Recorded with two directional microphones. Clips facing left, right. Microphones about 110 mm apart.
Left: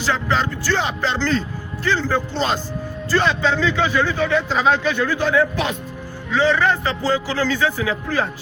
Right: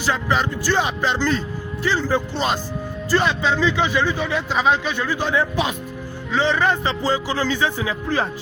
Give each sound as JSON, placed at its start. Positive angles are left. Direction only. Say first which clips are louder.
{"t": 0.0, "sound": "a man's voice", "louder": "even", "side_deg": -15}